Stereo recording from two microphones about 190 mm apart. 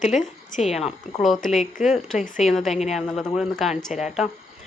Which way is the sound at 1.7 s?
45° left (ahead or behind).